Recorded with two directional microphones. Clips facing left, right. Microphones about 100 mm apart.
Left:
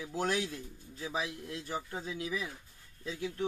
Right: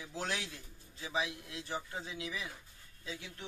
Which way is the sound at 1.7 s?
50° left (ahead or behind).